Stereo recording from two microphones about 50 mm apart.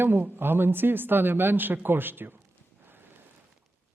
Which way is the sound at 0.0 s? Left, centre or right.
Right.